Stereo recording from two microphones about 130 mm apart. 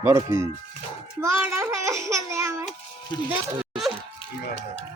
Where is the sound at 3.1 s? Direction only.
30° left (ahead or behind).